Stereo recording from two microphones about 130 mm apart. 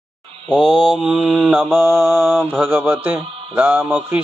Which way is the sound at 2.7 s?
15° right (ahead or behind).